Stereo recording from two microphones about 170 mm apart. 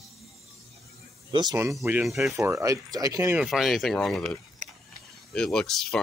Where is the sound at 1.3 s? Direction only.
20° right (ahead or behind).